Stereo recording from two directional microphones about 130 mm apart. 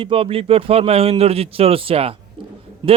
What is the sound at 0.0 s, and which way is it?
Speech, 45° right (ahead or behind).